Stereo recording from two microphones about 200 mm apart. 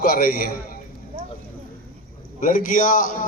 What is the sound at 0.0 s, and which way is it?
Speech, 50° left (ahead or behind).